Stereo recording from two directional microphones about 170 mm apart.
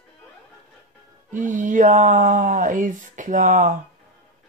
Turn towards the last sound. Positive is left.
turn(degrees=-50)  # may be behind; listen again after turning